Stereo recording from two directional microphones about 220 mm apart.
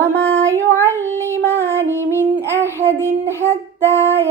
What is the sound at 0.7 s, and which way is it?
Child singing, 10° left (ahead or behind).